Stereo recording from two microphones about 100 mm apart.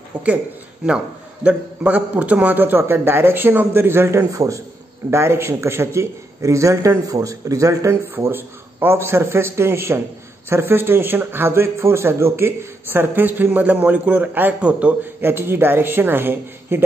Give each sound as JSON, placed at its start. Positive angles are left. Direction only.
{"t": 0.1, "sound": "a man's voice", "side_deg": -15}